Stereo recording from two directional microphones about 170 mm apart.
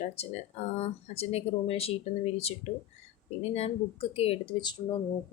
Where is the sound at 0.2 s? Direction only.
35° left (ahead or behind).